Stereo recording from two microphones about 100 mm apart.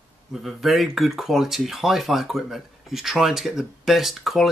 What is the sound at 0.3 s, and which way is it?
Speech, centre (ahead or behind).